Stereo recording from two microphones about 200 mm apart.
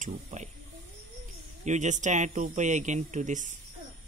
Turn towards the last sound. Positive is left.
turn(degrees=-40)  # may be behind; listen again after turning